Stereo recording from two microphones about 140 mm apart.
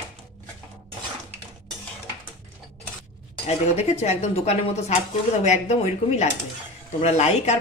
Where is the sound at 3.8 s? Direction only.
50° left (ahead or behind).